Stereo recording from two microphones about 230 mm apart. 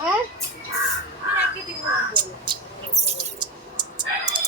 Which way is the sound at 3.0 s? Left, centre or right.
Right.